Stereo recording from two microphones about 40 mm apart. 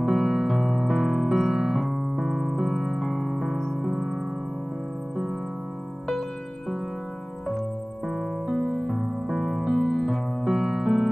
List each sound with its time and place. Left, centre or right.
0.1 s music: right
0.6 s music: centre
1.5 s piano: centre
1.8 s music: centre
3.0 s music: centre
8.1 s music: centre
8.7 s music: centre
10.4 s music: centre